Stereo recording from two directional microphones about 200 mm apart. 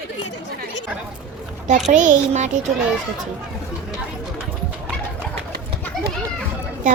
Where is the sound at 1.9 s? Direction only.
40° right (ahead or behind).